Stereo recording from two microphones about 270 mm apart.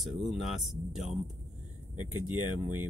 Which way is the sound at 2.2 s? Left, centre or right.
Centre.